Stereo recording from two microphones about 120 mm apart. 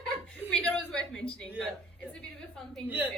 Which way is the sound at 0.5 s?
5° left (ahead or behind).